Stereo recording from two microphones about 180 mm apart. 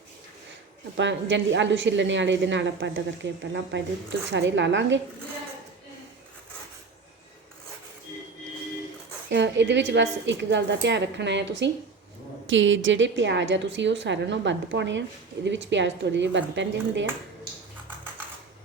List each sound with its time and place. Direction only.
0.9 s a woman's voice: 90° right
9.3 s a woman's voice: 80° right
12.5 s a woman's voice: 90° right